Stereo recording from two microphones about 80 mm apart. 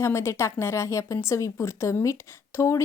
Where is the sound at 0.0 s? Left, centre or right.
Left.